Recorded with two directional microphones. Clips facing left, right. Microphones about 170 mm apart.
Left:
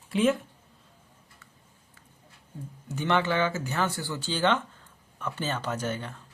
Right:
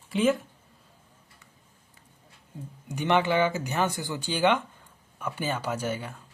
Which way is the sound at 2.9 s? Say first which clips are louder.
Right 2 dB; 15° right (ahead or behind).